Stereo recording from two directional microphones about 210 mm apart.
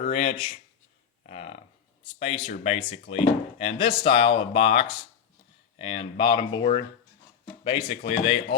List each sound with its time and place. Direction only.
0.0 s speech: 30° left (ahead or behind)
1.3 s a sound: 35° left (ahead or behind)
2.1 s speech: 25° left (ahead or behind)